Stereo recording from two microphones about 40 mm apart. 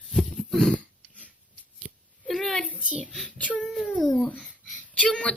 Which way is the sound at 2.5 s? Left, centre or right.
Left.